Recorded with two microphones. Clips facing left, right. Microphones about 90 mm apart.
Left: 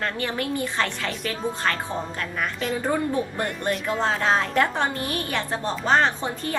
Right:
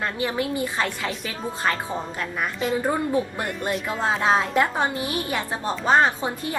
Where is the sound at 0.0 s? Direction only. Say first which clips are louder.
Right 2 dB; 15° right (ahead or behind).